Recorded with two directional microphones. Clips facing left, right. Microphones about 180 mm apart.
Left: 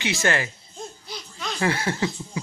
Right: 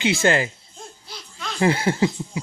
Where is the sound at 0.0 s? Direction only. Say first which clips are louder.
Right 5 dB; 30° right (ahead or behind).